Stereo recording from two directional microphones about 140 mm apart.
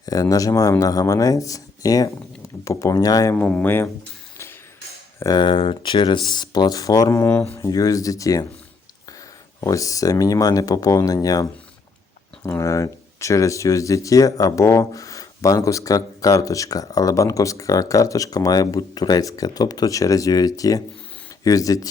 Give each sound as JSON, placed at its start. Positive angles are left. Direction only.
{"t": 0.0, "sound": "speech", "side_deg": 25}
{"t": 3.3, "sound": "speech", "side_deg": 10}
{"t": 5.2, "sound": "speech", "side_deg": 30}
{"t": 9.6, "sound": "speech", "side_deg": 25}